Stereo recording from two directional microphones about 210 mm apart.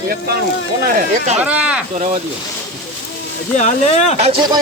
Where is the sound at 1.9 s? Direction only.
30° right (ahead or behind).